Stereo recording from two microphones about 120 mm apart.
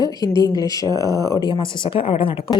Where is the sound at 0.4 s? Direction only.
30° left (ahead or behind).